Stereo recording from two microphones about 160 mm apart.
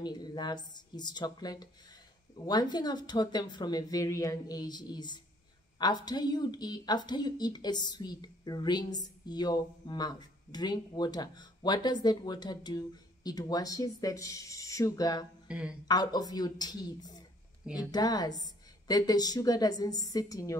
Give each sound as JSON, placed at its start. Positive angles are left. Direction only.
{"t": 0.0, "sound": "speech", "side_deg": 25}
{"t": 15.4, "sound": "a sound", "side_deg": -5}
{"t": 15.9, "sound": "speech", "side_deg": 25}